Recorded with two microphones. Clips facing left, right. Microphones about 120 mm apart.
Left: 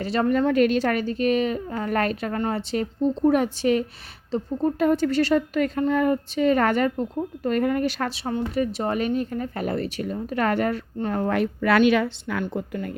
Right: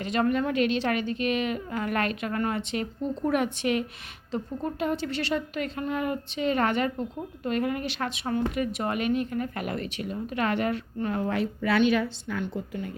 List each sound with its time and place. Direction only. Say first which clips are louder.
0.0 s speech: left 4 dB; 35° left (ahead or behind)
4.8 s a woman's voice: left 9 dB; 45° left (ahead or behind)
11.3 s a woman's voice: left 8 dB; 60° left (ahead or behind)